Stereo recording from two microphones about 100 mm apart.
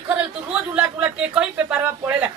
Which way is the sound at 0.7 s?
10° right (ahead or behind).